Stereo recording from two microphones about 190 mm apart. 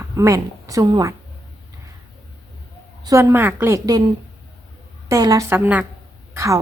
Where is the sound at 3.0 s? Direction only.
15° right (ahead or behind).